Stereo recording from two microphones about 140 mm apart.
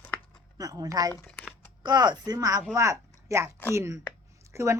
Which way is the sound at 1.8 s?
30° right (ahead or behind).